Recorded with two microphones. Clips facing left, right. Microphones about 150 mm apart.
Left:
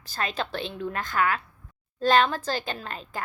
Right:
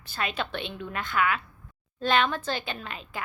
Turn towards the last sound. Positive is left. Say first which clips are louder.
# left 2 dB
turn(degrees=40)  # may be behind; listen again after turning